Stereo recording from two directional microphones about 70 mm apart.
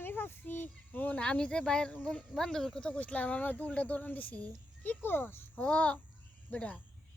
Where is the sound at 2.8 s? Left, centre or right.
Centre.